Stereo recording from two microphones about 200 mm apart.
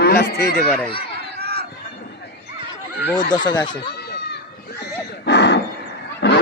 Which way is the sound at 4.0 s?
55° left (ahead or behind).